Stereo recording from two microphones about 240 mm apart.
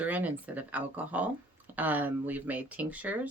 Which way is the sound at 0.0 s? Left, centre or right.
Centre.